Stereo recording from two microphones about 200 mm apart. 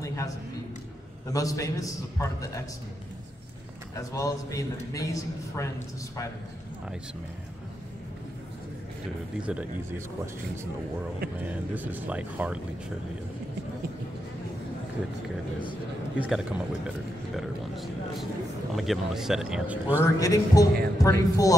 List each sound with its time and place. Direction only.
0.0 s a sound: 15° left (ahead or behind)
1.3 s a man's voice: 15° left (ahead or behind)
3.9 s a man's voice: 15° left (ahead or behind)
9.4 s speech: 5° right (ahead or behind)
11.4 s speech: 10° right (ahead or behind)
16.2 s speech: 5° right (ahead or behind)
18.7 s speech: centre (ahead or behind)
20.0 s a man's voice: 15° left (ahead or behind)